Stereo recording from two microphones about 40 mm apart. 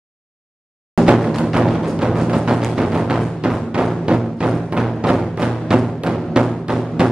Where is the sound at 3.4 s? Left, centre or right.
Right.